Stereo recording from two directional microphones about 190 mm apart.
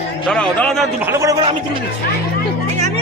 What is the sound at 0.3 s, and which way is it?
Speech, 5° left (ahead or behind).